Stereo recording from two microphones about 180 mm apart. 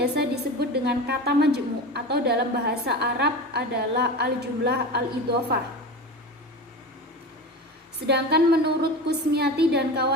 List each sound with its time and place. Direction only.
0.0 s a woman's voice: 65° right (ahead or behind)
8.0 s a woman's voice: 65° right (ahead or behind)